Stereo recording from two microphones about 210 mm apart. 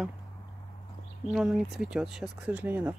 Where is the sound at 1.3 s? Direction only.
Centre (ahead or behind).